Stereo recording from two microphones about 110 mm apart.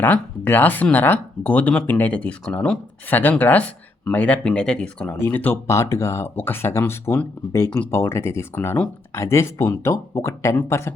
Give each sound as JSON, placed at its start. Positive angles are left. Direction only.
{"t": 0.0, "sound": "speech", "side_deg": 15}